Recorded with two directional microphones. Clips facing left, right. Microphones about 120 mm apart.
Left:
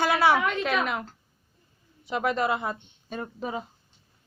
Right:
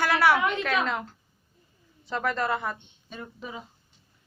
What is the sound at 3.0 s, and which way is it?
Speech, 45° left (ahead or behind).